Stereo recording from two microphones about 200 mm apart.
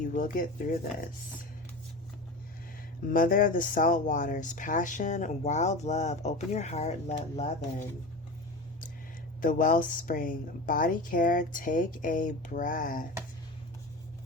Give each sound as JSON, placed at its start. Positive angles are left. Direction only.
{"t": 0.0, "sound": "speech", "side_deg": 40}
{"t": 3.1, "sound": "speech", "side_deg": 45}
{"t": 9.4, "sound": "speech", "side_deg": 40}